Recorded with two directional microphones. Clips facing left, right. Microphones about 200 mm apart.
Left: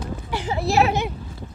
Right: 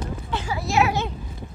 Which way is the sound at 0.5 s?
30° left (ahead or behind).